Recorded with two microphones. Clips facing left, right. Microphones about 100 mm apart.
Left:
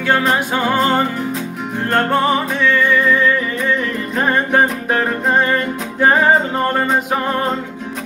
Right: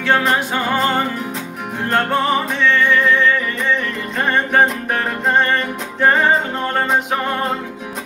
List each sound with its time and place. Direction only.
0.0 s music: 5° left (ahead or behind)
1.9 s music: centre (ahead or behind)